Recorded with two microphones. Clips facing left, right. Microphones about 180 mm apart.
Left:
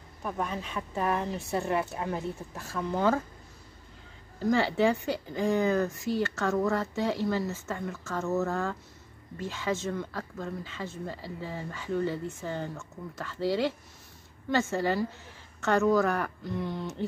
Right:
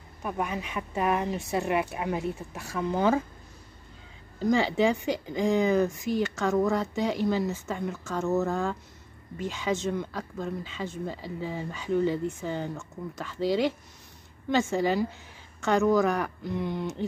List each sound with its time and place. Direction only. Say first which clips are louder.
0.2 s speech: right 2 dB; 10° right (ahead or behind)
4.4 s speech: right 1 dB; 15° right (ahead or behind)